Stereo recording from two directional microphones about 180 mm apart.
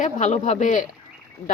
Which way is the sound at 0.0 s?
40° left (ahead or behind).